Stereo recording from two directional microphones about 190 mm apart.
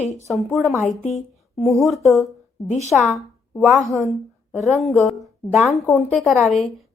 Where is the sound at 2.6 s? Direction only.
35° left (ahead or behind).